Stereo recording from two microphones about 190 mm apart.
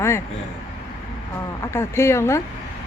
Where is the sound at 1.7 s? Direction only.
15° left (ahead or behind).